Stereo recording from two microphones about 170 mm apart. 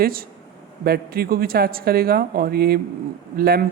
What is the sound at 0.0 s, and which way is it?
Speech, 60° right (ahead or behind).